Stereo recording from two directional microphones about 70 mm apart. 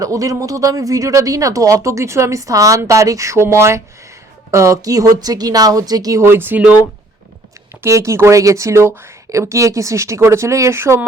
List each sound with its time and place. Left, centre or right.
0.0 s speech: right
6.1 s speech: right
7.8 s speech: right